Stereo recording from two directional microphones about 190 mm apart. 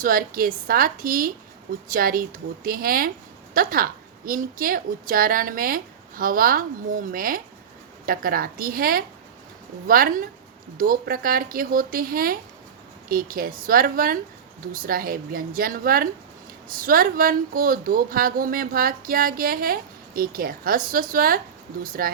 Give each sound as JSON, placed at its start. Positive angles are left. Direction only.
{"t": 0.0, "sound": "speech", "side_deg": -50}